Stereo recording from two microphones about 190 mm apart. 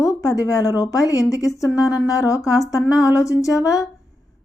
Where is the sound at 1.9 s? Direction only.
15° left (ahead or behind).